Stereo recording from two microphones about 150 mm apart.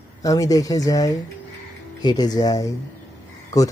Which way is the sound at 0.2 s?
25° left (ahead or behind).